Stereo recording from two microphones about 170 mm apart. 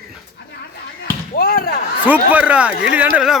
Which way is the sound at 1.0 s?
60° left (ahead or behind).